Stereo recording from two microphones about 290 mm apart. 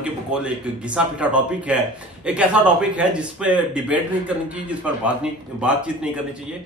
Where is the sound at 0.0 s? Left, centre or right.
Centre.